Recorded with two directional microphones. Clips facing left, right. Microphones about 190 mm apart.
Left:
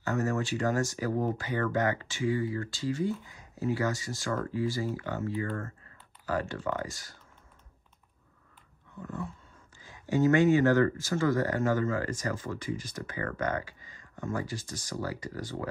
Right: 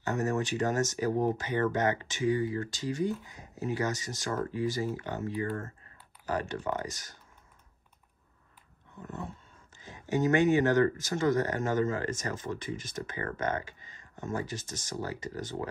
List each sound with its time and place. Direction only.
0.0 s speech: 20° right (ahead or behind)
9.8 s speech: 20° right (ahead or behind)